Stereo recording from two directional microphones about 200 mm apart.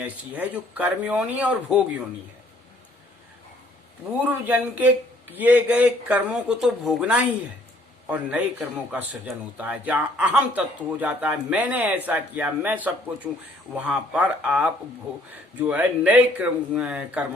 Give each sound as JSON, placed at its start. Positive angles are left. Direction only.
{"t": 0.0, "sound": "a man's voice", "side_deg": -5}
{"t": 4.2, "sound": "a man's voice", "side_deg": -10}